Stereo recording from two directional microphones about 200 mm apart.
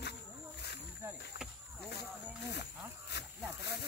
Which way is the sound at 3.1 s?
55° left (ahead or behind).